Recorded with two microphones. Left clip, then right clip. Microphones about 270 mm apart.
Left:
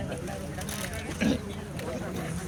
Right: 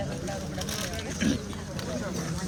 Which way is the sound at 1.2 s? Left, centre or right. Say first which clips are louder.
Left 1 dB; centre.